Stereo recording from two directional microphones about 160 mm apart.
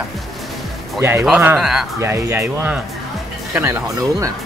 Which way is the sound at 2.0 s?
15° right (ahead or behind).